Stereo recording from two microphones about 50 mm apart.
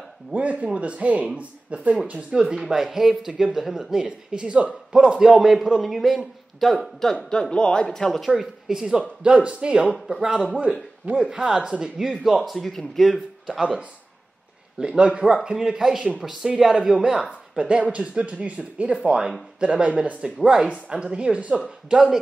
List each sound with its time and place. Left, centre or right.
0.3 s speech: right
2.5 s a man's voice: centre
7.5 s speech: centre
8.4 s speech: centre
10.0 s speech: centre
10.6 s a man's voice: right; by 13.2 s centre
14.8 s speech: centre
17.6 s speech: right